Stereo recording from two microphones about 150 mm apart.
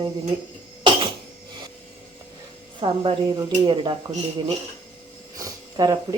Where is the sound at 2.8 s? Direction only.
35° right (ahead or behind).